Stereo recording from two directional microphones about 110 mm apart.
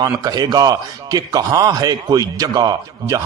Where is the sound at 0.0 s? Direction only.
35° right (ahead or behind).